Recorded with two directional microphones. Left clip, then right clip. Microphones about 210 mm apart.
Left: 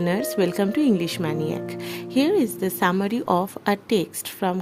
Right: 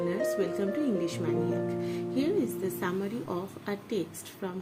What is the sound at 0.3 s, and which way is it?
A woman's voice, 55° left (ahead or behind).